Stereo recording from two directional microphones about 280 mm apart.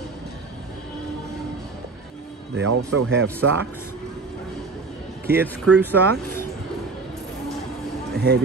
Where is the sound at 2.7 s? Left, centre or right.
Right.